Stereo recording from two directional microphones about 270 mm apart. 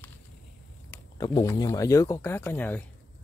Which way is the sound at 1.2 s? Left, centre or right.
Centre.